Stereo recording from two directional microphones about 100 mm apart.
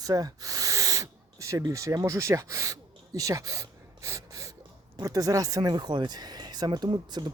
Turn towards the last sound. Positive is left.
turn(degrees=-45)  # may be behind; listen again after turning